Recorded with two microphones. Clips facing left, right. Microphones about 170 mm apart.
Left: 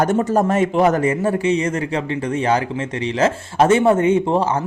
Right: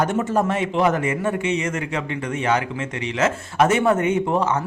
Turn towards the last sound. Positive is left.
turn(degrees=30)  # may be behind; listen again after turning